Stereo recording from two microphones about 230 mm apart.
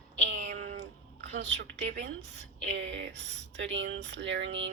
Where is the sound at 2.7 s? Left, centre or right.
Right.